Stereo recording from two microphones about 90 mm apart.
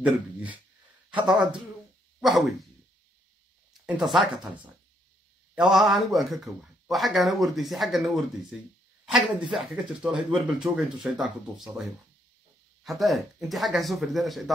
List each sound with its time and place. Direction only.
0.0 s speech: 15° right (ahead or behind)
4.0 s speech: centre (ahead or behind)
5.7 s speech: centre (ahead or behind)
9.0 s speech: 5° right (ahead or behind)
12.8 s speech: centre (ahead or behind)